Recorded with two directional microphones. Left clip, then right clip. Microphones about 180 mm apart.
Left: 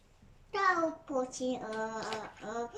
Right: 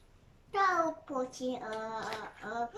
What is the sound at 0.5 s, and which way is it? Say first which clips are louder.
A child's voice: right 1 dB; centre (ahead or behind).